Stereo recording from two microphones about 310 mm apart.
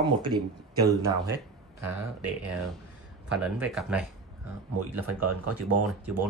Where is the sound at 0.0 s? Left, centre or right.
Centre.